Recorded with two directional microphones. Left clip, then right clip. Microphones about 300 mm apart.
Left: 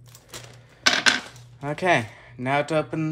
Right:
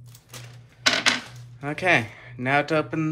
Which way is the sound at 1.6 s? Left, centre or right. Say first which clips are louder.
Even; centre.